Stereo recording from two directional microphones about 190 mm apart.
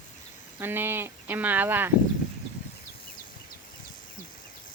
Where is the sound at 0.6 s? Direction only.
10° right (ahead or behind).